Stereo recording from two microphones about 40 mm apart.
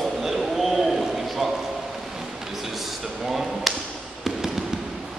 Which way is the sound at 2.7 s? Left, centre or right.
Centre.